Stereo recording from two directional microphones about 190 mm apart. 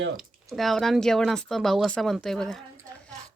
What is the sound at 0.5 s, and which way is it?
Speech, centre (ahead or behind).